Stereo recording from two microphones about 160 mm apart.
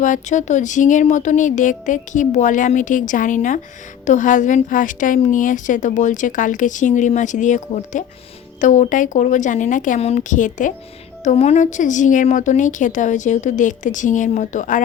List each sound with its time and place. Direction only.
0.0 s a woman's voice: 50° left (ahead or behind)